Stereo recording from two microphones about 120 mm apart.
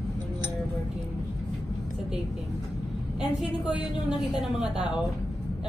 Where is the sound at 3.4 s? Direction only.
5° right (ahead or behind).